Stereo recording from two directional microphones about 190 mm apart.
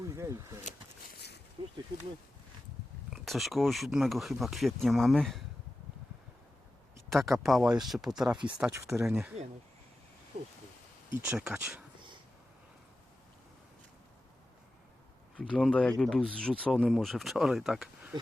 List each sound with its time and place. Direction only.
0.2 s speech: 15° right (ahead or behind)
1.1 s a sound: 60° left (ahead or behind)
3.1 s speech: centre (ahead or behind)
7.1 s speech: centre (ahead or behind)
11.2 s speech: 5° right (ahead or behind)
15.4 s speech: 5° left (ahead or behind)